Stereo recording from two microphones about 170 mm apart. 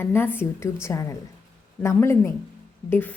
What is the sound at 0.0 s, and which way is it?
A woman's voice, 15° left (ahead or behind).